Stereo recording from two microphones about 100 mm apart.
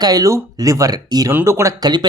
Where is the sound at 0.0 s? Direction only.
40° right (ahead or behind).